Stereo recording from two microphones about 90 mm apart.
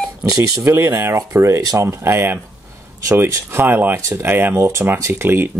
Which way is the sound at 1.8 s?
25° right (ahead or behind).